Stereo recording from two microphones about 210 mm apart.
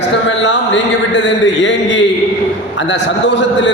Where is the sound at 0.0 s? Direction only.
60° left (ahead or behind).